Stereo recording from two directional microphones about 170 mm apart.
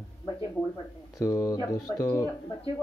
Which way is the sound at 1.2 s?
20° left (ahead or behind).